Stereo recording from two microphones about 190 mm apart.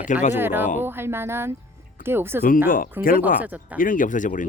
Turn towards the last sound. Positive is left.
turn(degrees=40)  # may be behind; listen again after turning